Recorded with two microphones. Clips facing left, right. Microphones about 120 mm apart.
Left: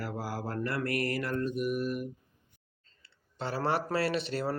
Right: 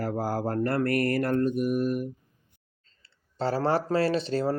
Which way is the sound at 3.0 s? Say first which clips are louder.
Right 8 dB; 30° right (ahead or behind).